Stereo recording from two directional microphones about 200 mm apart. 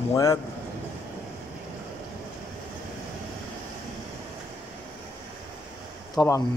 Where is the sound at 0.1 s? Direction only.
15° left (ahead or behind).